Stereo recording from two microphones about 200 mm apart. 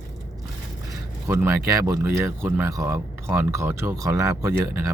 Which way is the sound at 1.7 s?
15° right (ahead or behind).